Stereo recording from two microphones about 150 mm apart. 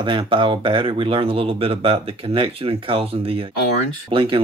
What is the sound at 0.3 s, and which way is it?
Speech, 35° right (ahead or behind).